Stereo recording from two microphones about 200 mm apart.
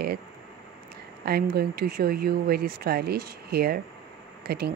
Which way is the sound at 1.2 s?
50° right (ahead or behind).